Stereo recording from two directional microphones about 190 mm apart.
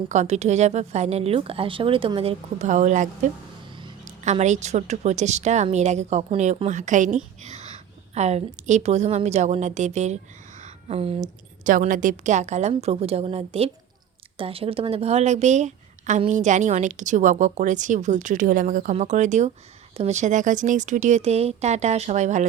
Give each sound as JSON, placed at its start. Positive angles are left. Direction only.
{"t": 0.1, "sound": "a woman's voice", "side_deg": -35}